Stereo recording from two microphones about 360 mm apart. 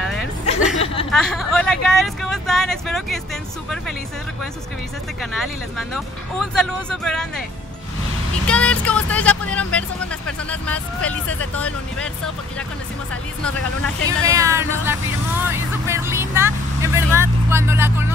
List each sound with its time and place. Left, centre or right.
0.0 s chuckle: centre
0.7 s a sound: centre
1.1 s speech: centre
5.2 s speech: centre
8.5 s speech: centre
14.0 s speech: centre
15.9 s vehicle: centre